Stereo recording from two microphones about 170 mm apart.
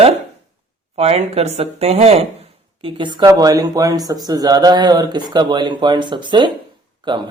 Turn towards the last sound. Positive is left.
turn(degrees=-25)  # may be behind; listen again after turning